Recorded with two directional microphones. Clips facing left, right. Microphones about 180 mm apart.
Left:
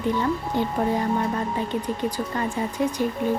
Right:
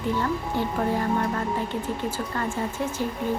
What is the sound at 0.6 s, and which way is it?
Speech, 20° left (ahead or behind).